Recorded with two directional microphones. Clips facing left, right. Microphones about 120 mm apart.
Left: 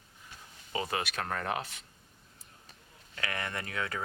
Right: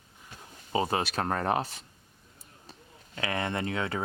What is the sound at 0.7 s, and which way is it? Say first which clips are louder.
Speech: right 6 dB; 30° right (ahead or behind).